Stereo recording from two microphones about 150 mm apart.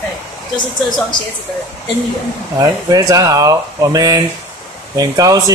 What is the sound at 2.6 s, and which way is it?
Speech, 25° right (ahead or behind).